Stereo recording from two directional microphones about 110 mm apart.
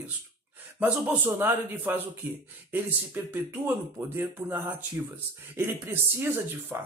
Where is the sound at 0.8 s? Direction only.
15° right (ahead or behind).